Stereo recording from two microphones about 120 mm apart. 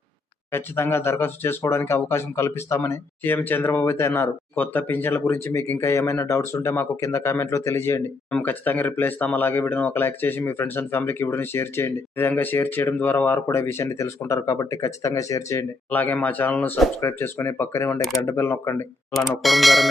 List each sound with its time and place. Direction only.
0.5 s speech: 20° left (ahead or behind)
15.9 s speech: 15° left (ahead or behind)
19.4 s speech: centre (ahead or behind)